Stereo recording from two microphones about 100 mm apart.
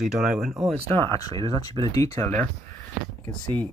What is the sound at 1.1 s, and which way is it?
Speech, 40° left (ahead or behind).